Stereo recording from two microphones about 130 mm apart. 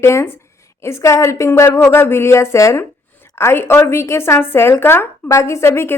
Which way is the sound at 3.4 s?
20° left (ahead or behind).